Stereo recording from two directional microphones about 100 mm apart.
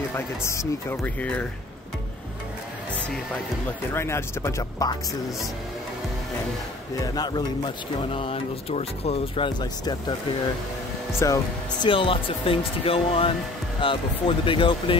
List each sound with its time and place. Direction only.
0.1 s speech: 30° left (ahead or behind)
1.0 s speech: 15° left (ahead or behind)
3.9 s speech: 25° left (ahead or behind)
7.0 s a man's voice: 40° left (ahead or behind)
8.1 s speech: 70° left (ahead or behind)
9.6 s a man's voice: 45° left (ahead or behind)
11.1 s speech: 35° left (ahead or behind)
11.8 s speech: 60° left (ahead or behind)